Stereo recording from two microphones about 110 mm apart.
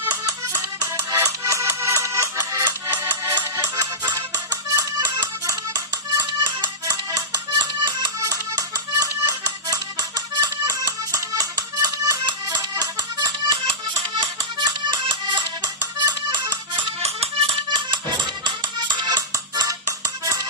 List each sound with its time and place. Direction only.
0.0 s music: 30° right (ahead or behind)
17.0 s music: 60° right (ahead or behind); by 19.7 s 35° right (ahead or behind)